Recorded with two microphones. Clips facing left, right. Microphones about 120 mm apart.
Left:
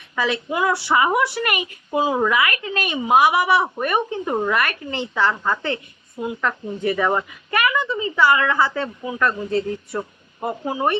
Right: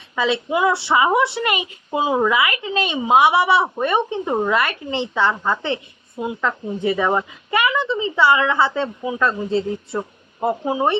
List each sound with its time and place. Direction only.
0.2 s speech: 20° right (ahead or behind)